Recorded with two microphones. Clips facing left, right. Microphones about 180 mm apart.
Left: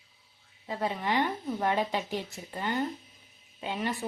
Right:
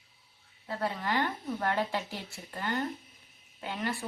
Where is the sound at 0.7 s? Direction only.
20° left (ahead or behind).